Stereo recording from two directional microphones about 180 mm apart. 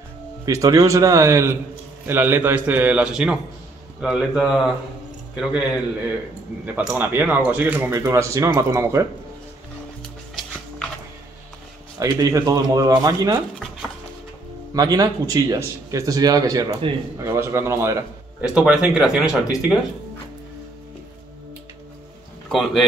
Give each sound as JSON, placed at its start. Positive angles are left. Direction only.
{"t": 0.5, "sound": "speech", "side_deg": -20}
{"t": 12.0, "sound": "a man's voice", "side_deg": -20}
{"t": 14.7, "sound": "a man's voice", "side_deg": -20}
{"t": 18.5, "sound": "speech", "side_deg": -5}
{"t": 22.5, "sound": "speech", "side_deg": 0}